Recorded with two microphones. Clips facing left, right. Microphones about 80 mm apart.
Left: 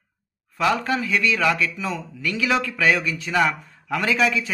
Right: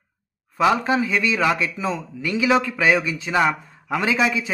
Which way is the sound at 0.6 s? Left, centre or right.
Right.